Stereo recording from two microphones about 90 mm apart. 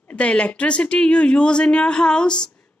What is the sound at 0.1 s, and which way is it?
Speech, 15° left (ahead or behind).